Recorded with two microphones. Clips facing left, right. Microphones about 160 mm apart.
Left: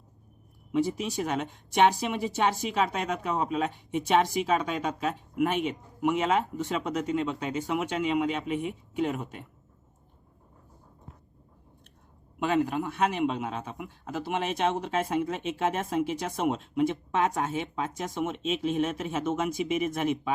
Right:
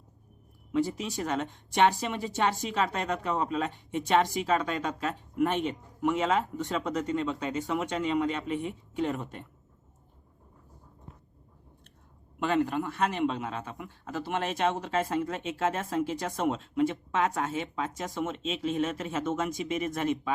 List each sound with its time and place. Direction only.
0.7 s speech: 15° left (ahead or behind)
6.0 s speech: 15° left (ahead or behind)
6.2 s speech: 5° left (ahead or behind)
12.4 s speech: 15° left (ahead or behind)